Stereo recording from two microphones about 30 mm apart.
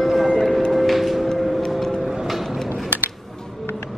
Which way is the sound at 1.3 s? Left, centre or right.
Centre.